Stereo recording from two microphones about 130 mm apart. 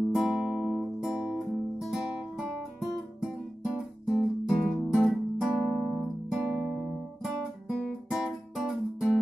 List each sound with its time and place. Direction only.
0.1 s music: 5° right (ahead or behind)
1.9 s guitar: centre (ahead or behind)
5.0 s music: centre (ahead or behind)
7.7 s guitar: centre (ahead or behind)